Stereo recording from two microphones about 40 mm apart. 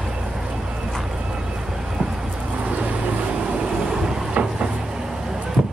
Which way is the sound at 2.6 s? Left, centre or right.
Right.